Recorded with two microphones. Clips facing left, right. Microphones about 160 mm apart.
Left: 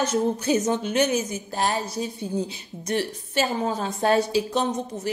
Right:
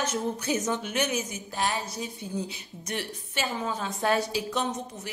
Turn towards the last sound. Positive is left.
turn(degrees=30)  # may be behind; listen again after turning